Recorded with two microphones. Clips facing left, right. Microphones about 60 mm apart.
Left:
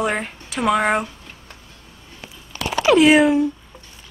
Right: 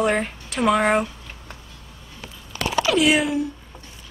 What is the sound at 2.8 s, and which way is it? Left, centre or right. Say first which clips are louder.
Speech: left 7 dB; left.